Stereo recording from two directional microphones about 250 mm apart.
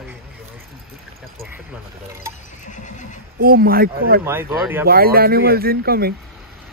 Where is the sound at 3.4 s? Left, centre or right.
Right.